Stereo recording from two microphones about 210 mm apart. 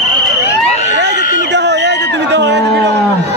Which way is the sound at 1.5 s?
55° right (ahead or behind).